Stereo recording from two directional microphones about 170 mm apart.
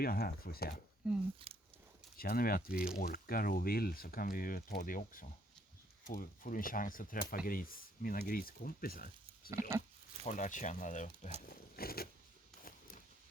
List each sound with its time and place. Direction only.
0.0 s speech: 60° left (ahead or behind)
1.4 s speech: 35° right (ahead or behind)
2.1 s speech: 60° left (ahead or behind)
9.5 s pig: 15° right (ahead or behind)
10.2 s speech: 45° left (ahead or behind)
11.4 s speech: 60° left (ahead or behind)